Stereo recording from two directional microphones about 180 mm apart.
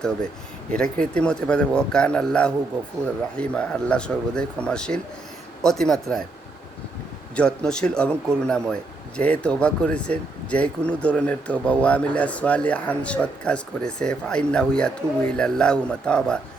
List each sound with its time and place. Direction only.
0.7 s a man's voice: 5° left (ahead or behind)
7.3 s a man's voice: 5° left (ahead or behind)